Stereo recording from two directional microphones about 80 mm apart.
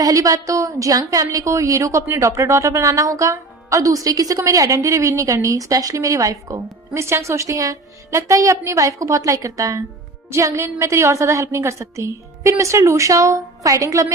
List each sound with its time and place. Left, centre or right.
0.0 s a woman's voice: right